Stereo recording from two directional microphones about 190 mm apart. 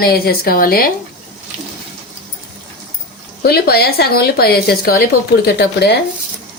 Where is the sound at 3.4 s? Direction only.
55° left (ahead or behind).